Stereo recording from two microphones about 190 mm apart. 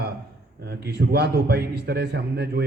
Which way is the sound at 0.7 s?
55° right (ahead or behind).